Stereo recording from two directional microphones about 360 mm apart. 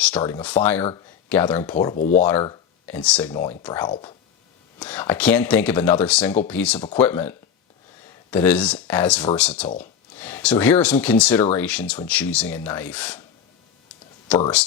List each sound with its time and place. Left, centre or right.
0.0 s speech: centre
2.0 s speech: left
2.4 s speech: centre
14.3 s speech: centre